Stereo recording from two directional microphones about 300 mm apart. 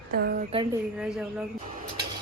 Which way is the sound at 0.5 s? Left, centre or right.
Centre.